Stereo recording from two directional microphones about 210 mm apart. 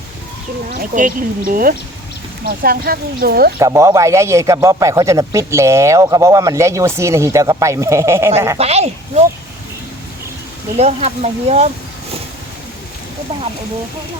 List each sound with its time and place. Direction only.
0.9 s a woman's voice: 40° right (ahead or behind)
3.6 s speech: 15° right (ahead or behind)
8.5 s speech: 30° right (ahead or behind)
10.8 s speech: 30° right (ahead or behind)